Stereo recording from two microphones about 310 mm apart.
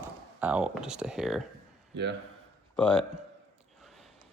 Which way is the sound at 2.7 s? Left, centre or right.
Centre.